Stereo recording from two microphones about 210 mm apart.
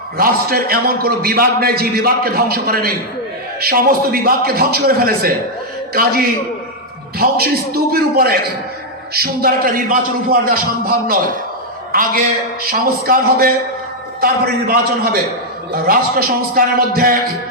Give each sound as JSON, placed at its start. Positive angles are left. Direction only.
{"t": 0.2, "sound": "a man's voice", "side_deg": -45}